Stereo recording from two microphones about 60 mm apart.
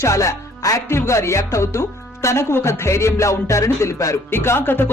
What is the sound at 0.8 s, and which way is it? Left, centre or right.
Speech, left.